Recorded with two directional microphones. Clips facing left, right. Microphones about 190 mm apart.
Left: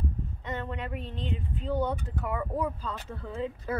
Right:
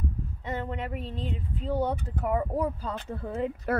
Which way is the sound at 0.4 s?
10° right (ahead or behind).